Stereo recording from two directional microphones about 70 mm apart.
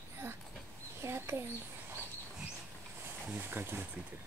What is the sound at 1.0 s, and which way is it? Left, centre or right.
Bird, right.